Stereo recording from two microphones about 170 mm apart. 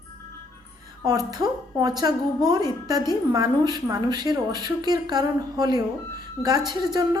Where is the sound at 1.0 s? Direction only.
20° right (ahead or behind).